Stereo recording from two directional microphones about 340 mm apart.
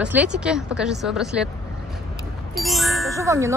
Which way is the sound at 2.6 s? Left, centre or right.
Centre.